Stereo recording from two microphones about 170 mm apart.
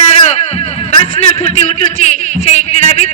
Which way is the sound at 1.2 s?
35° left (ahead or behind).